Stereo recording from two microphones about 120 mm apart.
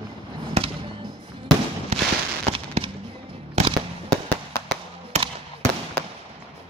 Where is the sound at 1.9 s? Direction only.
65° right (ahead or behind).